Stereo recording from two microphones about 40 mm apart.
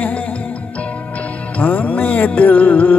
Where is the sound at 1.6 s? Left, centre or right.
Left.